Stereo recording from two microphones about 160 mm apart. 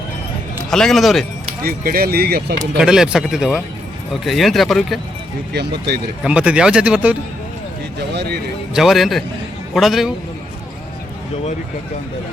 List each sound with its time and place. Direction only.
0.7 s speech: centre (ahead or behind)
1.6 s speech: 70° right (ahead or behind)
2.7 s speech: 5° right (ahead or behind)
5.5 s speech: 90° right
6.2 s speech: 5° right (ahead or behind)
8.1 s a man's voice: 90° right
8.7 s speech: centre (ahead or behind)